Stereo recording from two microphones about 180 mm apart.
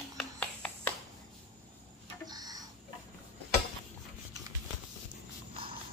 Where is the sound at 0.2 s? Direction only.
10° left (ahead or behind).